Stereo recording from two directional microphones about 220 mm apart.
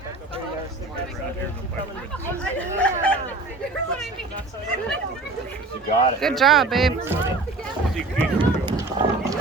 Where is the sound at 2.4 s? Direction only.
5° left (ahead or behind).